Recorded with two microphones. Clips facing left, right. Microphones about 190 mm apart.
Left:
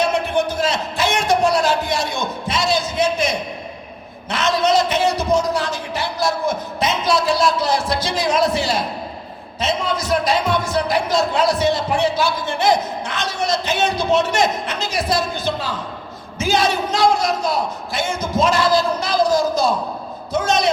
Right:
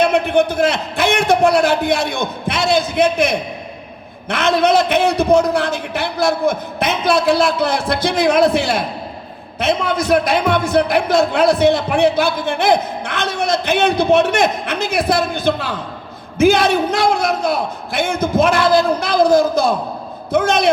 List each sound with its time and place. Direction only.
0.0 s a man's voice: 60° right (ahead or behind)